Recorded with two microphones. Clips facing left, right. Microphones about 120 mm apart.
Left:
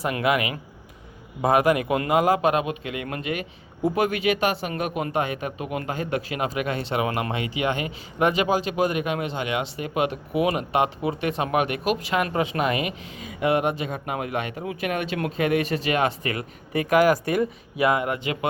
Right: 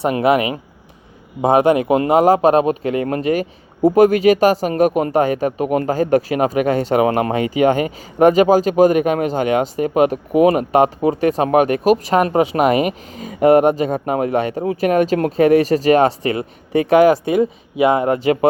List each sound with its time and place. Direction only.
0.0 s speech: 30° right (ahead or behind)